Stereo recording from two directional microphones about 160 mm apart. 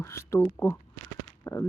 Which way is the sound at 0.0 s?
15° left (ahead or behind).